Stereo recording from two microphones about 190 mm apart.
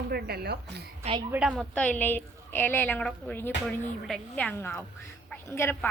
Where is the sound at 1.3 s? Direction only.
5° right (ahead or behind).